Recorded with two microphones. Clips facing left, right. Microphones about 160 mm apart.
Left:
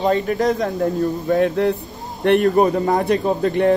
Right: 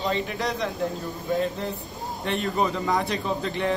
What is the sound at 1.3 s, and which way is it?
Speech, 65° left (ahead or behind).